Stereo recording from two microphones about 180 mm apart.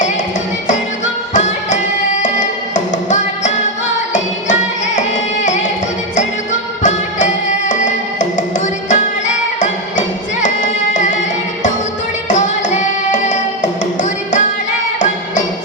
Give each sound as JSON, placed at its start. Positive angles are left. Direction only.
{"t": 1.3, "sound": "music", "side_deg": 40}
{"t": 4.9, "sound": "music", "side_deg": 40}